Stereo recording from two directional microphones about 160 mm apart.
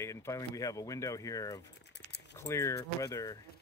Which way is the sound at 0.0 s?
15° left (ahead or behind).